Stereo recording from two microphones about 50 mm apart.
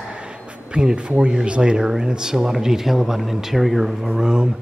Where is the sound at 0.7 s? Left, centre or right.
Centre.